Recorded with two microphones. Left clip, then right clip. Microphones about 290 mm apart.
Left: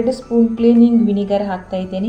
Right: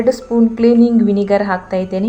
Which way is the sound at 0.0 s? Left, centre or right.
Right.